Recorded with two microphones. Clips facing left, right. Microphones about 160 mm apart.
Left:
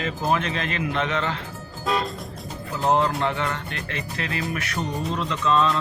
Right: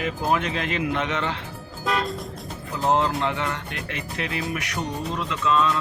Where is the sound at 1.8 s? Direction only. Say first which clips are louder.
Even; centre (ahead or behind).